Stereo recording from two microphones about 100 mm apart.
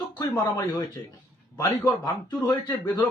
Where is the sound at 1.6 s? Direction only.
35° left (ahead or behind).